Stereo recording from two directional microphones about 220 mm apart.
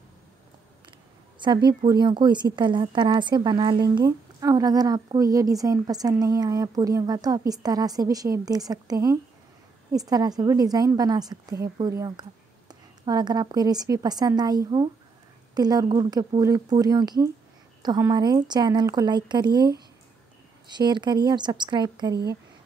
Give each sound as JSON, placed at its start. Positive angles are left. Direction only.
{"t": 1.4, "sound": "a woman's voice", "side_deg": -20}